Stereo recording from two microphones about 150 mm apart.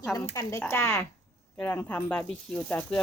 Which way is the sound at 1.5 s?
10° left (ahead or behind).